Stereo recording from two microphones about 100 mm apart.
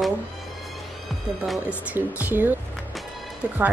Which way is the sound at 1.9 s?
15° right (ahead or behind).